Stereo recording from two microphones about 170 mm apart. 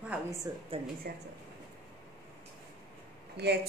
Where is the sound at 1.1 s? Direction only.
65° right (ahead or behind).